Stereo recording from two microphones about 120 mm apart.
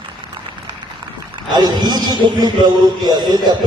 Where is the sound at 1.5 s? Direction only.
35° right (ahead or behind).